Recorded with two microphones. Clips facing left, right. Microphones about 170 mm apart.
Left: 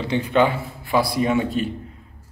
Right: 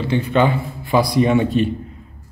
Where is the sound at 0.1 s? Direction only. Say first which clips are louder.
Right 2 dB; 15° left (ahead or behind).